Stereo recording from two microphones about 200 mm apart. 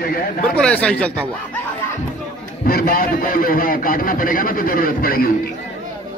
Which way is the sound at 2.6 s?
50° left (ahead or behind).